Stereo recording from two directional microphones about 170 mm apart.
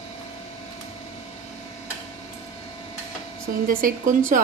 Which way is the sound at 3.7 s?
55° right (ahead or behind).